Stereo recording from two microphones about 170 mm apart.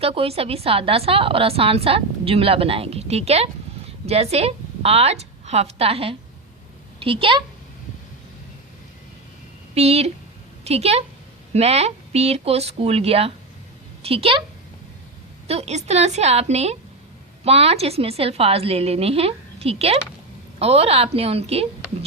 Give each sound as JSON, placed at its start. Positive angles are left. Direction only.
{"t": 0.0, "sound": "a woman's voice", "side_deg": -35}
{"t": 9.7, "sound": "a woman's voice", "side_deg": -40}
{"t": 15.4, "sound": "a woman's voice", "side_deg": -40}